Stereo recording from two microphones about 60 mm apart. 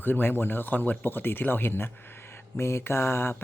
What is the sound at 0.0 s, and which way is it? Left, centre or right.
A man's voice, left.